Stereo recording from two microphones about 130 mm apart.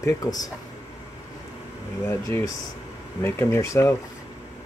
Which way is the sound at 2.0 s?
20° left (ahead or behind).